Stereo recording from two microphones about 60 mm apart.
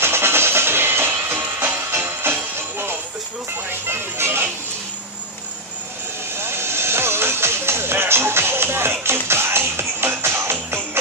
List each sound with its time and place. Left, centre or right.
0.0 s music: right
6.3 s music: right